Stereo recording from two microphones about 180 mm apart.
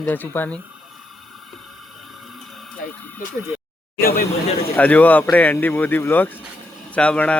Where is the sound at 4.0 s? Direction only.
55° left (ahead or behind).